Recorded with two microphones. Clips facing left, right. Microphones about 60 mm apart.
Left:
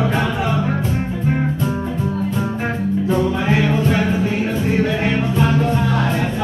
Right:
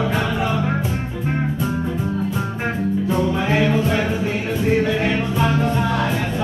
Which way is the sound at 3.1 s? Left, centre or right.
Centre.